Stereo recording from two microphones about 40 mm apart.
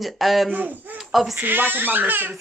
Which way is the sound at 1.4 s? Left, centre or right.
Right.